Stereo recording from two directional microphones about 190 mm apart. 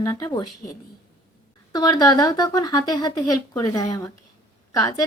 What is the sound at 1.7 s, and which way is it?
A woman's voice, 20° left (ahead or behind).